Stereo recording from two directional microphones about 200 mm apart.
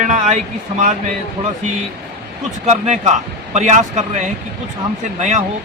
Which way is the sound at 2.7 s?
35° right (ahead or behind).